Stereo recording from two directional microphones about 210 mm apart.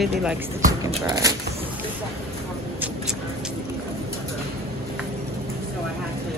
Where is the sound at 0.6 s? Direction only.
15° right (ahead or behind).